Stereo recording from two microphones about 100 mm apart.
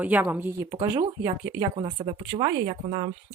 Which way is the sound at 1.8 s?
65° right (ahead or behind).